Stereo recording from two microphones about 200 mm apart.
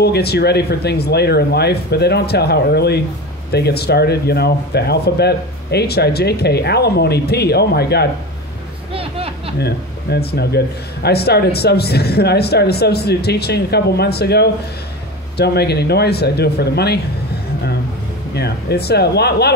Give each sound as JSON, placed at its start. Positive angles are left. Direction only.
{"t": 0.0, "sound": "speech", "side_deg": 55}
{"t": 8.9, "sound": "a sound", "side_deg": -30}
{"t": 9.6, "sound": "a man's voice", "side_deg": 55}
{"t": 18.3, "sound": "speech", "side_deg": 55}